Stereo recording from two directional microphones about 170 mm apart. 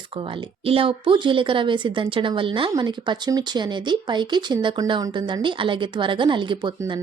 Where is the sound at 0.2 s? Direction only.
30° right (ahead or behind).